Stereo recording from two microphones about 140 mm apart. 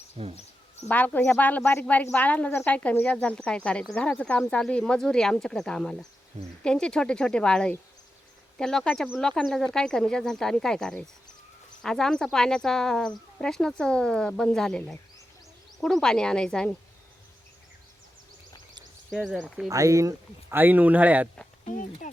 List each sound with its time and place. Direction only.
0.2 s speech: 45° right (ahead or behind)
0.9 s speech: 10° left (ahead or behind)
19.1 s speech: 5° right (ahead or behind)
19.7 s speech: 20° right (ahead or behind)
21.7 s speech: 60° left (ahead or behind)